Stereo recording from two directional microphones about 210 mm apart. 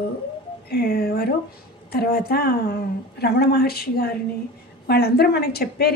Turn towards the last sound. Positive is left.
turn(degrees=50)  # may be behind; listen again after turning